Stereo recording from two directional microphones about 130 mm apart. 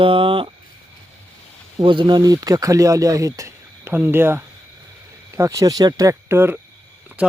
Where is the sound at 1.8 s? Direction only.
40° right (ahead or behind); by 6.6 s 15° right (ahead or behind).